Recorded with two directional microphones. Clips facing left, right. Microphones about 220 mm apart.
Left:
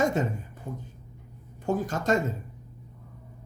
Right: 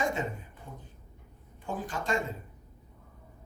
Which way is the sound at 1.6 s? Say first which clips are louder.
Left 8 dB; 45° left (ahead or behind).